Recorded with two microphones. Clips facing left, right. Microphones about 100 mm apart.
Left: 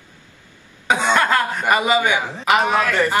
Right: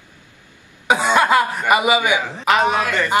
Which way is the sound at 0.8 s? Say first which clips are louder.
Right 2 dB; 15° right (ahead or behind).